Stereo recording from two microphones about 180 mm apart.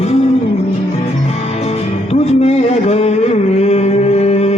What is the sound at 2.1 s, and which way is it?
Music, 35° left (ahead or behind).